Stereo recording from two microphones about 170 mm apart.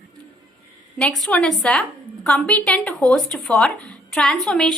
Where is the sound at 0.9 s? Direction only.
Centre (ahead or behind).